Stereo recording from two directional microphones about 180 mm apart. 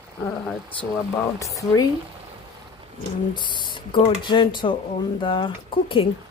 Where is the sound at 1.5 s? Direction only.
20° left (ahead or behind).